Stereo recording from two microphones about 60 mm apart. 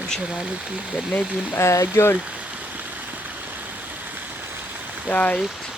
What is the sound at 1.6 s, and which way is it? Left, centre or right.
Speech, left.